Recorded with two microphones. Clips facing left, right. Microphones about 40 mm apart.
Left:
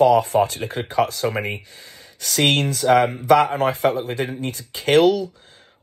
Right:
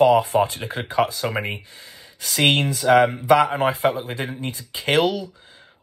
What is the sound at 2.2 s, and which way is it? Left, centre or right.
Speech, right.